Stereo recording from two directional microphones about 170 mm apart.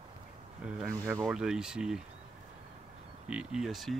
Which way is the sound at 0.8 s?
15° right (ahead or behind).